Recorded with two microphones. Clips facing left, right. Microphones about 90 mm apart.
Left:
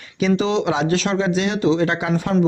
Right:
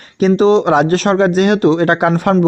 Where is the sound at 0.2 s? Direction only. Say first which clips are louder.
Right 8 dB; 45° right (ahead or behind).